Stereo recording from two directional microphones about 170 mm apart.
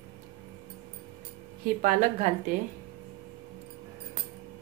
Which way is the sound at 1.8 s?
50° right (ahead or behind).